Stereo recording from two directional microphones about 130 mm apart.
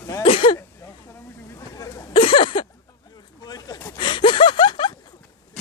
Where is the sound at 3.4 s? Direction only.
30° left (ahead or behind).